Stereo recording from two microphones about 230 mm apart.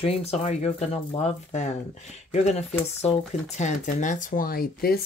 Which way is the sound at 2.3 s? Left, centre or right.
Left.